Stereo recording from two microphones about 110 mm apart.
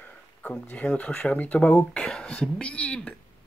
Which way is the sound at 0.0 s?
15° left (ahead or behind).